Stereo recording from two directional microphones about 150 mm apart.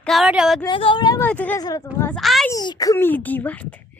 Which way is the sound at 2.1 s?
Centre (ahead or behind).